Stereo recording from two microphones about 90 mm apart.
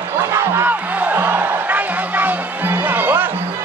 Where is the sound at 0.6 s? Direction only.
20° right (ahead or behind).